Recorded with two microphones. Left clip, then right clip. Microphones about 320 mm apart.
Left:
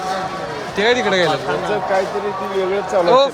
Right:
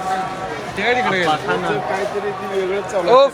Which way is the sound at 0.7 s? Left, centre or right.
Centre.